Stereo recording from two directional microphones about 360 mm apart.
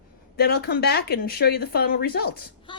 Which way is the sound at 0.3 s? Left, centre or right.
Left.